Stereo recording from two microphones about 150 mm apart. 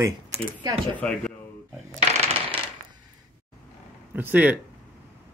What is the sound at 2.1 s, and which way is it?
Coin, 35° right (ahead or behind).